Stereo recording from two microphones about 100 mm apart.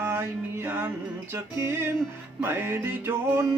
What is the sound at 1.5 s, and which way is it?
Music, 25° right (ahead or behind).